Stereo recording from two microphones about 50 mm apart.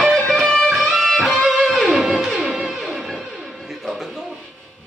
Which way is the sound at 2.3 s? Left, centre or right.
Centre.